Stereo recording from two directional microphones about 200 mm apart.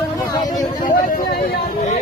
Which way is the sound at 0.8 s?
45° left (ahead or behind).